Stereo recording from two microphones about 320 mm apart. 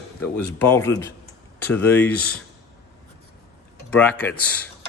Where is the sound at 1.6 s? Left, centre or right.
Centre.